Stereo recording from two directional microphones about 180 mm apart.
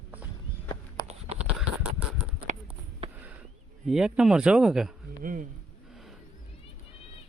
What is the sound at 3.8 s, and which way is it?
Speech, 5° right (ahead or behind).